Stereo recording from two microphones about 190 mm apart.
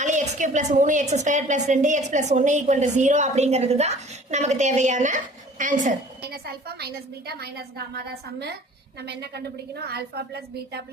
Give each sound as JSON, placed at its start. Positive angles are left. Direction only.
{"t": 0.0, "sound": "a woman's voice", "side_deg": -40}